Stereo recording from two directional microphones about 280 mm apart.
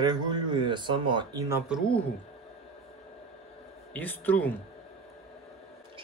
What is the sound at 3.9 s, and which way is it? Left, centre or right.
Speech, centre.